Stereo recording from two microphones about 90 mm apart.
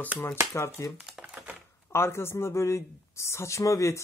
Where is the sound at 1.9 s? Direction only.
30° left (ahead or behind).